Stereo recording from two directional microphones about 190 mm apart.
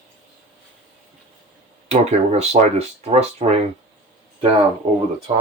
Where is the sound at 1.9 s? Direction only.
35° right (ahead or behind).